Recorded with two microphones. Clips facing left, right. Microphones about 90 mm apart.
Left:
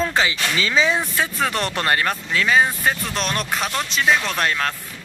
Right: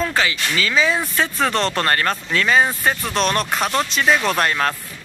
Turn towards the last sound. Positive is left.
turn(degrees=-5)  # may be behind; listen again after turning